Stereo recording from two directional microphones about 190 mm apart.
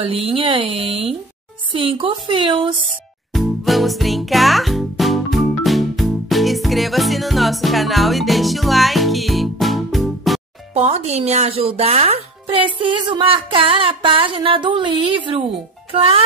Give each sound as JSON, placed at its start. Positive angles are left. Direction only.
{"t": 0.0, "sound": "speech", "side_deg": -30}
{"t": 2.9, "sound": "music", "side_deg": 0}
{"t": 10.7, "sound": "a child's voice", "side_deg": -35}